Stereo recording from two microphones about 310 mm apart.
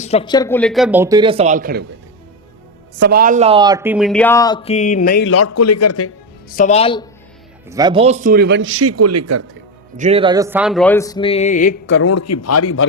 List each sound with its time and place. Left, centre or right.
0.0 s speech: centre; by 1.9 s right
3.0 s speech: right; by 5.2 s left
5.2 s a man's voice: left
6.5 s speech: left
7.7 s a man's voice: centre; by 9.5 s right
10.0 s speech: centre; by 11.8 s left
11.9 s a man's voice: left
12.1 s a man's voice: left